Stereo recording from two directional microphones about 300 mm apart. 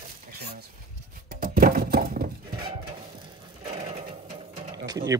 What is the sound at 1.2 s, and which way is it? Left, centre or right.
Music, right.